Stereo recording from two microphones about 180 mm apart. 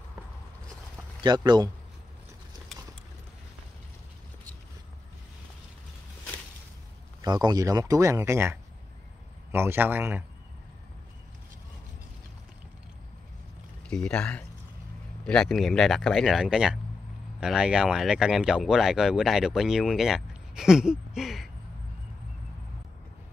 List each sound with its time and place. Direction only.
1.2 s speech: 25° right (ahead or behind)
2.7 s clip-clop: centre (ahead or behind)
7.2 s speech: 20° right (ahead or behind)
13.8 s speech: 5° left (ahead or behind)